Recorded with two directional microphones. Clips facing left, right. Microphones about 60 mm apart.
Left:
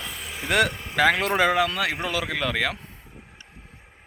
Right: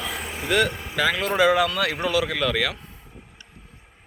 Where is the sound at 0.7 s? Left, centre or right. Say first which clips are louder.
Right 2 dB; centre.